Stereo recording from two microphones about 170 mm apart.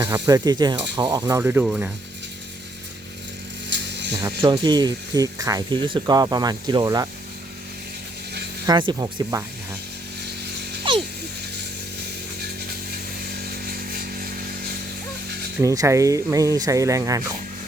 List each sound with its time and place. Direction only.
0.0 s speech: 15° right (ahead or behind)
1.2 s speech: 15° right (ahead or behind)
3.7 s vehicle: 90° right
4.2 s speech: 25° right (ahead or behind)
8.6 s speech: 25° right (ahead or behind)
13.2 s chainsaw: 65° right (ahead or behind)
15.6 s speech: 20° right (ahead or behind)